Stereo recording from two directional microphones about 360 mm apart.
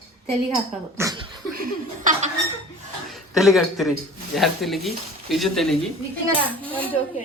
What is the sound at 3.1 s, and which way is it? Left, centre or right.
Speech, centre.